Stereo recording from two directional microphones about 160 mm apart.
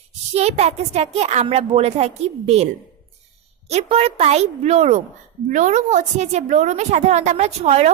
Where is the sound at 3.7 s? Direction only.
40° right (ahead or behind).